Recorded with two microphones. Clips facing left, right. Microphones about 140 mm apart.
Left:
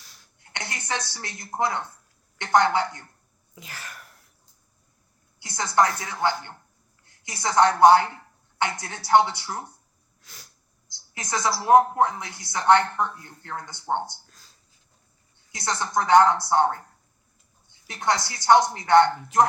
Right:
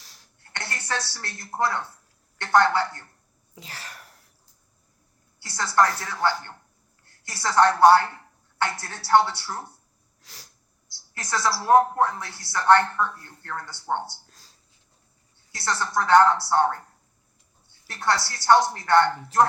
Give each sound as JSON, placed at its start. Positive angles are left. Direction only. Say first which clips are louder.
{"t": 0.0, "sound": "a sound", "louder": "even", "side_deg": -40}
{"t": 0.5, "sound": "a woman's voice", "louder": "even", "side_deg": 15}
{"t": 3.5, "sound": "wail", "louder": "even", "side_deg": -35}
{"t": 5.4, "sound": "speech", "louder": "even", "side_deg": 15}
{"t": 10.8, "sound": "speech", "louder": "even", "side_deg": 15}
{"t": 14.3, "sound": "a sound", "louder": "even", "side_deg": -35}
{"t": 15.5, "sound": "speech", "louder": "even", "side_deg": 15}
{"t": 17.7, "sound": "a woman's voice", "louder": "even", "side_deg": 15}